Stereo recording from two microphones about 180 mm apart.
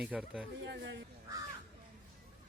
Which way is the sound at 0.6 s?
75° right (ahead or behind).